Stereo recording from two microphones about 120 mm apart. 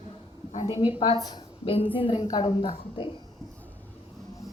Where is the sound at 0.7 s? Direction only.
50° left (ahead or behind).